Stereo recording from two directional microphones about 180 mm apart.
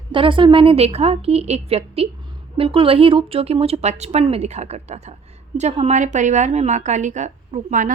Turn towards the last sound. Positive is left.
turn(degrees=-45)  # may be behind; listen again after turning